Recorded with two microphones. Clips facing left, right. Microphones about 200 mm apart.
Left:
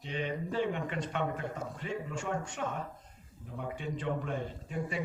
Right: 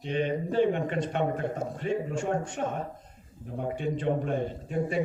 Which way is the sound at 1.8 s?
55° right (ahead or behind).